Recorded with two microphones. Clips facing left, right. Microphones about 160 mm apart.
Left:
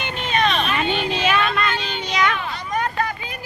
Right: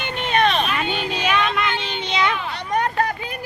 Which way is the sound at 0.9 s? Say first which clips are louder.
Left 2 dB; 10° right (ahead or behind).